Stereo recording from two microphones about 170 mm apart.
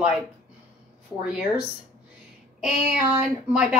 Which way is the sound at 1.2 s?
5° right (ahead or behind).